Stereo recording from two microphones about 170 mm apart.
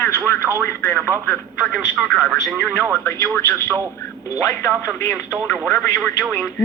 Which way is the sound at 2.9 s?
15° left (ahead or behind).